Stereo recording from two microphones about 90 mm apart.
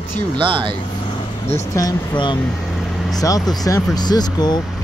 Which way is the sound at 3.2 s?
40° left (ahead or behind).